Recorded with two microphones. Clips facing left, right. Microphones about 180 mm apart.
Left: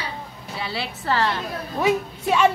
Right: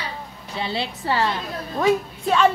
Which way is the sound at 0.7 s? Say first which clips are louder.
Even; 20° right (ahead or behind).